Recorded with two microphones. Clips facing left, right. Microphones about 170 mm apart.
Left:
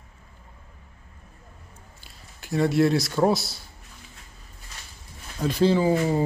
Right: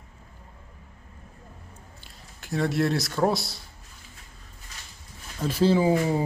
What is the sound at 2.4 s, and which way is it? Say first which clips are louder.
Speech: left 4 dB; centre (ahead or behind).